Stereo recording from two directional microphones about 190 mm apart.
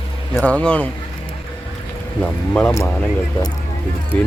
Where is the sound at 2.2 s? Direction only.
5° left (ahead or behind).